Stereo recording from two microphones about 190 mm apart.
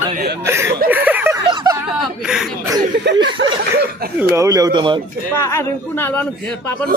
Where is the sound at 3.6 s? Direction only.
55° right (ahead or behind).